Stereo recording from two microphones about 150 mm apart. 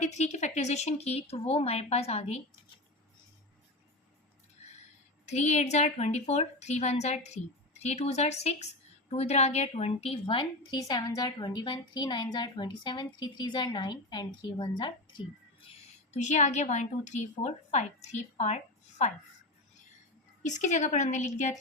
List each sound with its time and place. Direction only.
0.0 s a woman's voice: 50° left (ahead or behind)
5.2 s a woman's voice: 50° left (ahead or behind); by 14.9 s 30° left (ahead or behind)
16.1 s a woman's voice: 50° left (ahead or behind)
20.4 s a woman's voice: 55° left (ahead or behind)